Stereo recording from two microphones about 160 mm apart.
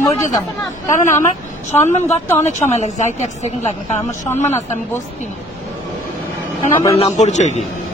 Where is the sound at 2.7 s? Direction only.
45° left (ahead or behind).